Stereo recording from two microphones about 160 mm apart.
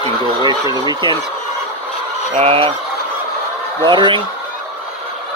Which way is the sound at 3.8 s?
30° right (ahead or behind).